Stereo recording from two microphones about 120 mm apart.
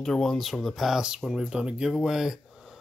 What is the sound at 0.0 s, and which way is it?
Speech, 5° left (ahead or behind).